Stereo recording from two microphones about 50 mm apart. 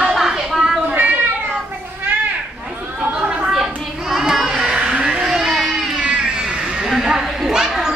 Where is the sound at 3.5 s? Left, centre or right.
Centre.